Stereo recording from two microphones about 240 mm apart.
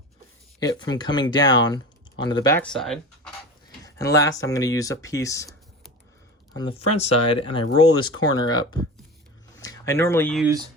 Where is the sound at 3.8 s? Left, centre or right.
Centre.